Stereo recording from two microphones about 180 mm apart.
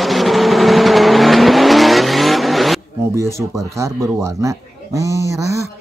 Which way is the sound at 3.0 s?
15° right (ahead or behind).